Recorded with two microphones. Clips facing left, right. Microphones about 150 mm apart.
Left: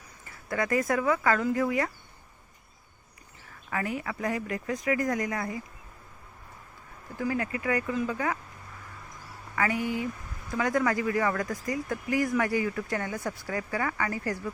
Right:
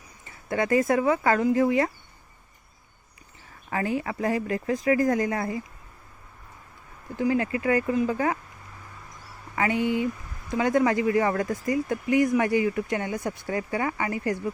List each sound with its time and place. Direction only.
0.3 s speech: 25° right (ahead or behind)
3.7 s speech: 30° right (ahead or behind)
7.2 s speech: 25° right (ahead or behind)
9.6 s speech: 25° right (ahead or behind)